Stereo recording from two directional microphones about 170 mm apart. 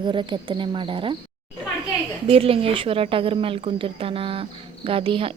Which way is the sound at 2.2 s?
35° right (ahead or behind).